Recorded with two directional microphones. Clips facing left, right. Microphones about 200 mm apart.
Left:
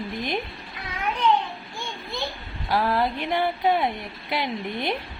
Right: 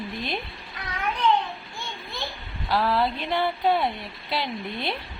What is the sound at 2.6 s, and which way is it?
Speech, 15° left (ahead or behind).